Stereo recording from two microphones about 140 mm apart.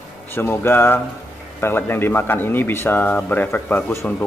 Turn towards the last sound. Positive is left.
turn(degrees=10)  # may be behind; listen again after turning